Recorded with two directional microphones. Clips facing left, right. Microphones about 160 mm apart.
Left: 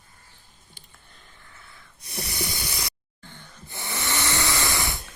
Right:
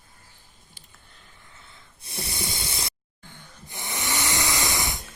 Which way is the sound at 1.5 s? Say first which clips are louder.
Left 1 dB; 20° right (ahead or behind).